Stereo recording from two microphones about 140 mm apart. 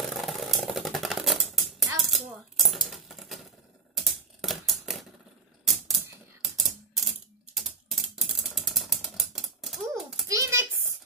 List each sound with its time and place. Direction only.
0.2 s music: centre (ahead or behind)
3.9 s typewriter: centre (ahead or behind)
10.2 s a sound: 25° right (ahead or behind)